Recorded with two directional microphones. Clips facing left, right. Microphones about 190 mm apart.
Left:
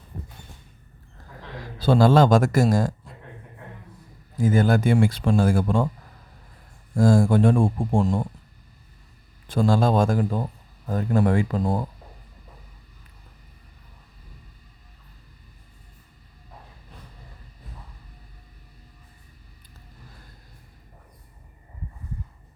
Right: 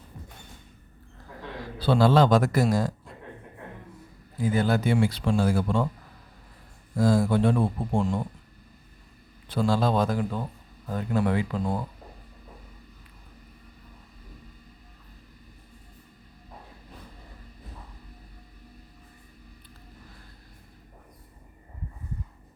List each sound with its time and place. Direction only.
1.8 s a man's voice: 45° left (ahead or behind)
4.4 s a man's voice: 45° left (ahead or behind)
6.9 s a man's voice: 50° left (ahead or behind)
9.5 s a man's voice: 45° left (ahead or behind)